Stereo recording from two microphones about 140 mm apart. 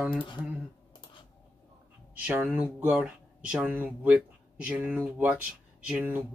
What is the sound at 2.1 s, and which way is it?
Speech, 10° right (ahead or behind).